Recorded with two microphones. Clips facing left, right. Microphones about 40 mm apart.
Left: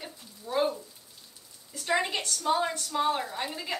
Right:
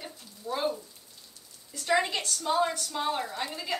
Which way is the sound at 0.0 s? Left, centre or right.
Centre.